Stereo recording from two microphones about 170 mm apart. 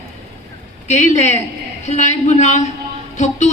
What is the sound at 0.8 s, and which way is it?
A man's voice, 40° left (ahead or behind).